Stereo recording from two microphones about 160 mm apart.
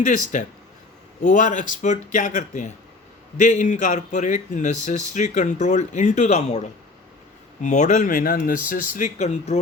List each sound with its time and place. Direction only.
0.0 s speech: 50° left (ahead or behind)
7.6 s speech: 50° left (ahead or behind)